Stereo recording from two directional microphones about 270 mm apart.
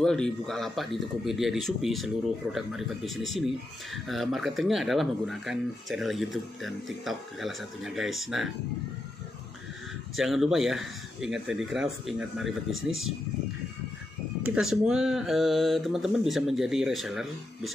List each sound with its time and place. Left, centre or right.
0.0 s speech: centre
10.1 s speech: centre
14.5 s speech: centre